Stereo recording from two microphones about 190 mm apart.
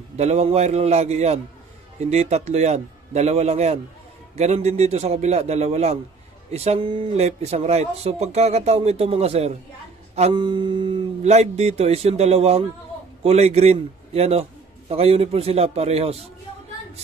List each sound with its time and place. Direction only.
0.2 s speech: 35° right (ahead or behind)